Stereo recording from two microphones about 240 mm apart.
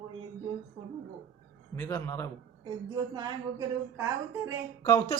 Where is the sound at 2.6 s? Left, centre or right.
Centre.